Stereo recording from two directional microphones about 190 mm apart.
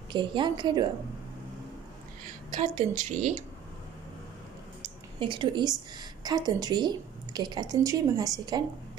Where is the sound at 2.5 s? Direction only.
40° right (ahead or behind).